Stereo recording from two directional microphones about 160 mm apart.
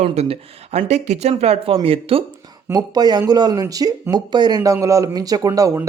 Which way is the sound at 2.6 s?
25° right (ahead or behind).